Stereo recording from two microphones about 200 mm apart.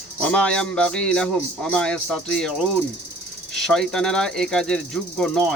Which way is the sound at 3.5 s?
Centre (ahead or behind).